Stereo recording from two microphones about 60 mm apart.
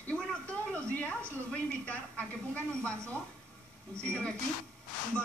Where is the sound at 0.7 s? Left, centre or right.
Left.